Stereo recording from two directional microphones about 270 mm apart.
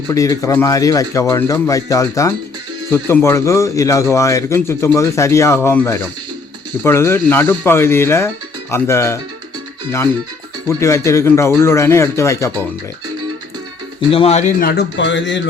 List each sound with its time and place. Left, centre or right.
0.1 s speech: centre
10.8 s speech: centre
14.1 s a man's voice: left